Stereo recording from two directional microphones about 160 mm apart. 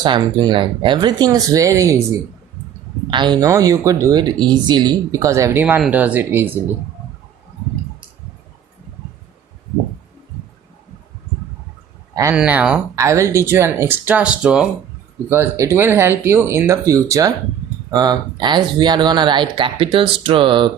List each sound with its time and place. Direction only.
0.0 s speech: 30° right (ahead or behind)
3.1 s speech: 30° right (ahead or behind); by 6.5 s 10° right (ahead or behind)
12.3 s speech: 10° right (ahead or behind)
13.0 s speech: 20° right (ahead or behind)
15.3 s speech: 15° right (ahead or behind); by 20.7 s 30° right (ahead or behind)